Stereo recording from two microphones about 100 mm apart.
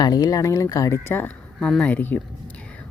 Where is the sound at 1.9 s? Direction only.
20° left (ahead or behind).